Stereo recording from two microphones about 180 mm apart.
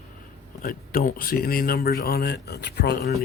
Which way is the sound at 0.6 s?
50° left (ahead or behind).